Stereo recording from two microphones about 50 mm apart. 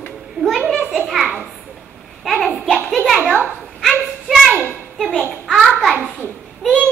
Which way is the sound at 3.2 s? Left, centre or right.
Right.